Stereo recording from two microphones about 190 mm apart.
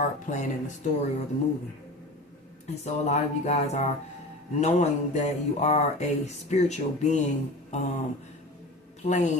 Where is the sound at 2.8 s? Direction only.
35° left (ahead or behind).